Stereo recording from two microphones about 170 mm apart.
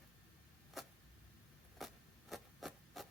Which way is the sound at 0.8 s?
Centre (ahead or behind).